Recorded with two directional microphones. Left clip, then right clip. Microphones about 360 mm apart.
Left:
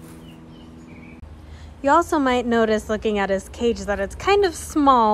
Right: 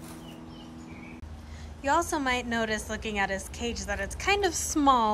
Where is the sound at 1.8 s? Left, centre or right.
Centre.